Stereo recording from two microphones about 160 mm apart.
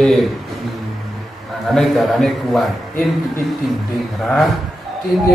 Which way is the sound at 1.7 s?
Centre (ahead or behind).